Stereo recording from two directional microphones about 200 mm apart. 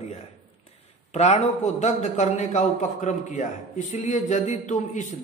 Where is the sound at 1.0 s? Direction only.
35° left (ahead or behind).